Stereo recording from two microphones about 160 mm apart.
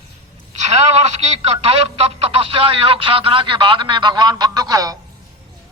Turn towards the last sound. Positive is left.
turn(degrees=-25)  # may be behind; listen again after turning